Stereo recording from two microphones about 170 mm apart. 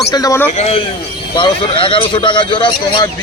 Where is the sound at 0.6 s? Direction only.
35° left (ahead or behind).